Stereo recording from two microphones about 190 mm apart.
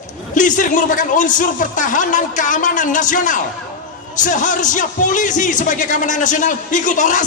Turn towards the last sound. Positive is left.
turn(degrees=40)  # may be behind; listen again after turning